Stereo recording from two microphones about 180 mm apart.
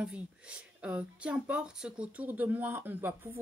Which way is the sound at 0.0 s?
5° right (ahead or behind).